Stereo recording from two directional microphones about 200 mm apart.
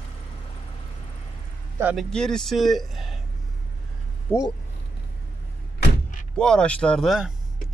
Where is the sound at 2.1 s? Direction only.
5° left (ahead or behind).